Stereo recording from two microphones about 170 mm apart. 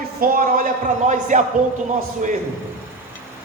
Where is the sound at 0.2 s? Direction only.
55° right (ahead or behind).